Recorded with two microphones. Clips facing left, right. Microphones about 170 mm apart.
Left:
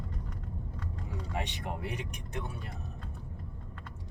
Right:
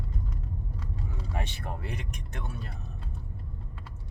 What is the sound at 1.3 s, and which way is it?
Speech, 15° left (ahead or behind).